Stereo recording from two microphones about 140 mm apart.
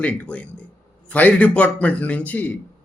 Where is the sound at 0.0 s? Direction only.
10° left (ahead or behind).